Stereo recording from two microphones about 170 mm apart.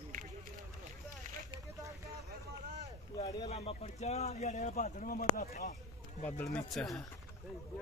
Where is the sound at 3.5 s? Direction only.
40° left (ahead or behind); by 5.5 s 55° left (ahead or behind).